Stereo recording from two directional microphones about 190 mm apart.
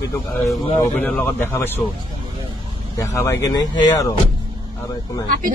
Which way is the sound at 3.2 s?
15° left (ahead or behind).